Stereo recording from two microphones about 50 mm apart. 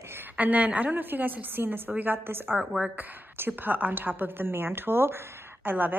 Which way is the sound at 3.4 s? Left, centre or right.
Right.